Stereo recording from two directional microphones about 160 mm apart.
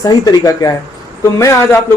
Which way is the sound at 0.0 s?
25° left (ahead or behind).